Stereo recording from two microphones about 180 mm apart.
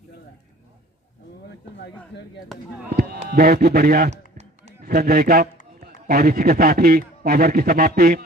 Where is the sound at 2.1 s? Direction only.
80° left.